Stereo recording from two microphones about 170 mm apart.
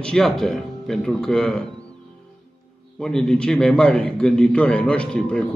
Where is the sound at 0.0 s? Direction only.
Centre (ahead or behind).